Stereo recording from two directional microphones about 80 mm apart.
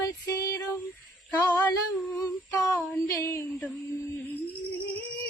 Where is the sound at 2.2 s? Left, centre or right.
Left.